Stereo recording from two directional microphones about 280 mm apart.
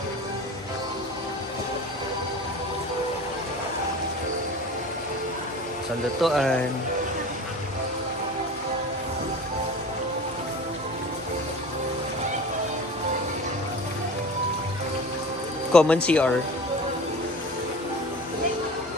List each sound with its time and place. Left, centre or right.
6.2 s speech: centre
15.7 s speech: centre